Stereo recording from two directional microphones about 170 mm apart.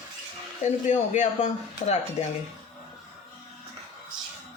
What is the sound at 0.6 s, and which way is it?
Speech, 45° left (ahead or behind).